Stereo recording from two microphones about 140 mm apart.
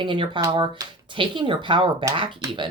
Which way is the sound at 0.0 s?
35° right (ahead or behind).